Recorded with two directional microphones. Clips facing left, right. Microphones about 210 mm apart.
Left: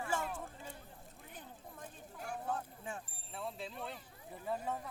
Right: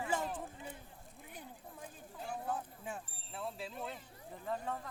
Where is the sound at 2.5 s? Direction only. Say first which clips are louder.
Left 1 dB; 5° right (ahead or behind).